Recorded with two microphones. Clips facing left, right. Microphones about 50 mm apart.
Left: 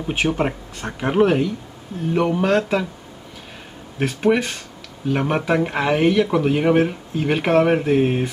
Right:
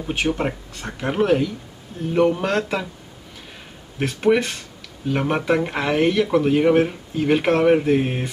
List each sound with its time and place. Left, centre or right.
0.0 s speech: centre
4.0 s speech: centre